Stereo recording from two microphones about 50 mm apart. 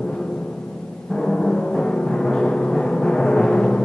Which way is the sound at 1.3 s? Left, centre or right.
Centre.